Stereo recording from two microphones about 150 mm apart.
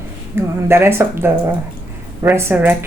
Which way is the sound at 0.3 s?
15° right (ahead or behind).